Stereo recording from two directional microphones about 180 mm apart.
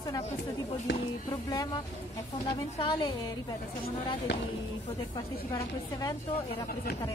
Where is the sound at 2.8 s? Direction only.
25° left (ahead or behind).